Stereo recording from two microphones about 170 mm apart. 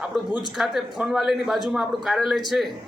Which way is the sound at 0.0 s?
5° right (ahead or behind).